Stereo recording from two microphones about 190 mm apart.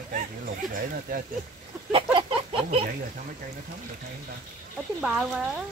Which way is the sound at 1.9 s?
30° right (ahead or behind).